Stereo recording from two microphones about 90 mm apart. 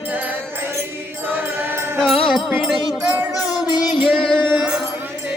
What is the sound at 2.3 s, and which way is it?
Music, centre (ahead or behind).